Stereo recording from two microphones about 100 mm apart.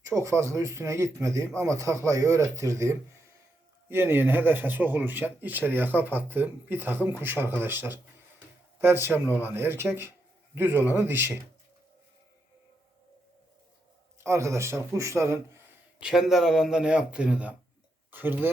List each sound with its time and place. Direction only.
0.0 s speech: 30° right (ahead or behind)
14.3 s speech: 30° right (ahead or behind)
16.0 s speech: 5° right (ahead or behind)